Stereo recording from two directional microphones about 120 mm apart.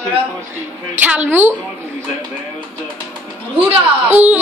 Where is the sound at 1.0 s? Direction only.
15° right (ahead or behind).